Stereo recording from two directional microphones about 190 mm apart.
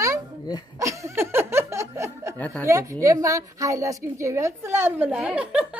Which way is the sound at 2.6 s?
15° right (ahead or behind).